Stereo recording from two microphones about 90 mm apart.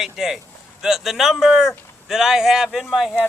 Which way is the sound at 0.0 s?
5° right (ahead or behind).